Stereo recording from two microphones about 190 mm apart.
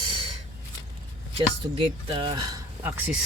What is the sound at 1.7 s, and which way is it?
Speech, 25° right (ahead or behind).